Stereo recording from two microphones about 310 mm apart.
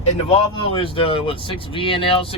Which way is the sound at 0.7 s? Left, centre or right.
Centre.